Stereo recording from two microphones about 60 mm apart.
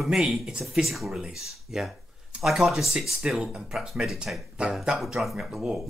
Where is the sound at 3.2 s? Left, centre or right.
Centre.